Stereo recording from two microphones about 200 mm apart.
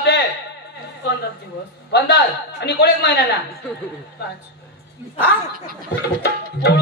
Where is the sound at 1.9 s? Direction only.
55° left (ahead or behind).